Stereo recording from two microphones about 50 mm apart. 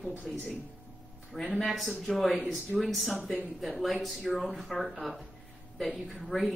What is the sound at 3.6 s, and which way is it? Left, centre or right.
Speech, centre.